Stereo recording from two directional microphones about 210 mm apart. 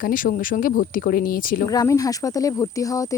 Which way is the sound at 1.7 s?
15° left (ahead or behind).